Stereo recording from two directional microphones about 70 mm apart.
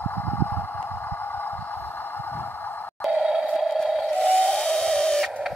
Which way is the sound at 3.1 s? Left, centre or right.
Centre.